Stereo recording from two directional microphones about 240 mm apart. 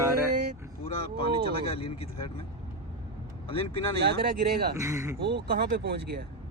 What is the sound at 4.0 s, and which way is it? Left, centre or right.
Speech, right.